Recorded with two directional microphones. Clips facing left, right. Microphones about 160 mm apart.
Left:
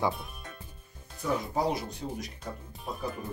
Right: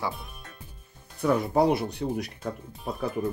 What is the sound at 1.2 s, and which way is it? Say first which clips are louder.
Speech: right 7 dB; 65° right (ahead or behind).